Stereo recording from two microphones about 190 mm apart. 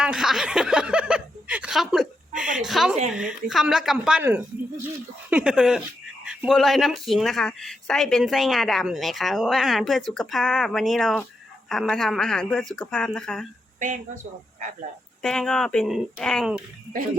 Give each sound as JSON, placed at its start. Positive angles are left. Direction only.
{"t": 0.0, "sound": "speech", "side_deg": -5}
{"t": 13.7, "sound": "speech", "side_deg": -40}
{"t": 15.2, "sound": "speech", "side_deg": 0}